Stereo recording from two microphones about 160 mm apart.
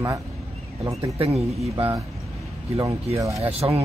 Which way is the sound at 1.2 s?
40° right (ahead or behind).